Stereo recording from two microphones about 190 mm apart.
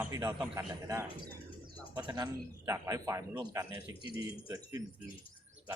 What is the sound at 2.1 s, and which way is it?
Speech, 20° right (ahead or behind).